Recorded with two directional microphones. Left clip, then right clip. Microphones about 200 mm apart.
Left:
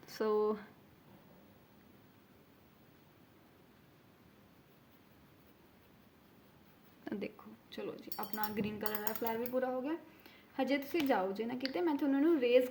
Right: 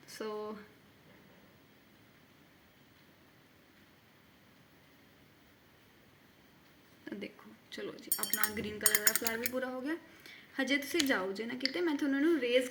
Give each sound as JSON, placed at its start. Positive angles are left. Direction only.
{"t": 0.1, "sound": "speech", "side_deg": 25}
{"t": 7.0, "sound": "a sound", "side_deg": 20}
{"t": 7.7, "sound": "a woman's voice", "side_deg": 5}